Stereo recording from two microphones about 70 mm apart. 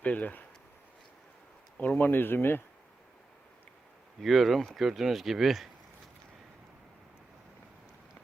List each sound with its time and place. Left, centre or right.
0.0 s speech: left
1.8 s speech: left
4.2 s speech: centre